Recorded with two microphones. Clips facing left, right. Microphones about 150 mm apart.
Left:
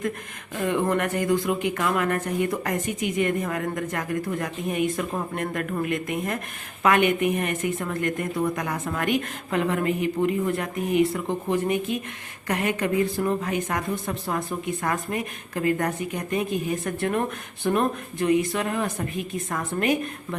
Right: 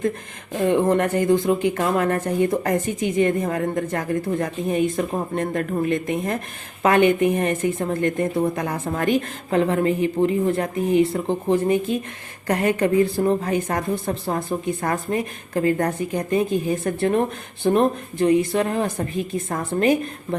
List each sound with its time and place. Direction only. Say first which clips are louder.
0.5 s a woman's voice: right 5 dB; 30° right (ahead or behind)